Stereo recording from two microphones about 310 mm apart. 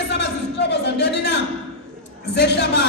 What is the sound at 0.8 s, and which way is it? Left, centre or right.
Speech, left.